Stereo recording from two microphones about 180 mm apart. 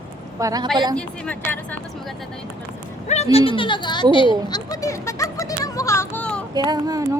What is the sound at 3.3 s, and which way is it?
Speech, 30° left (ahead or behind).